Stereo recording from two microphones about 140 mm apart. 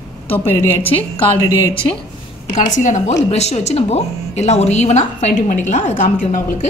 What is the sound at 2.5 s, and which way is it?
Speech, 60° left (ahead or behind).